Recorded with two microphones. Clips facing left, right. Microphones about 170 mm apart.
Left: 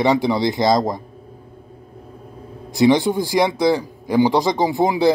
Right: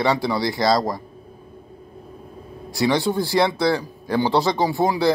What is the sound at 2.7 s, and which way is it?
Speech, 20° left (ahead or behind).